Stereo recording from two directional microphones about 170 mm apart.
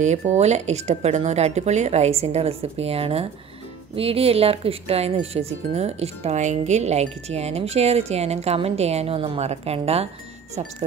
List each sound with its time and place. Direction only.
0.0 s speech: 45° right (ahead or behind)